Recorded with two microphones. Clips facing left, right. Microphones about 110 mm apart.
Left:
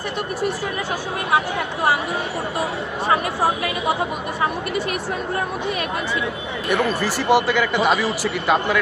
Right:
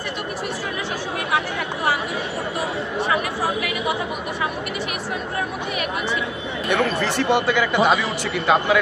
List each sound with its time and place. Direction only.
6.7 s speech: 5° left (ahead or behind)